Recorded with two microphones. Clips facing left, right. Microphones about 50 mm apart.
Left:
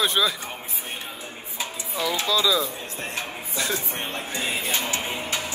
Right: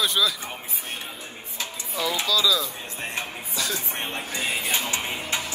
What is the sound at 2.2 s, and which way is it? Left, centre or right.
Speech, left.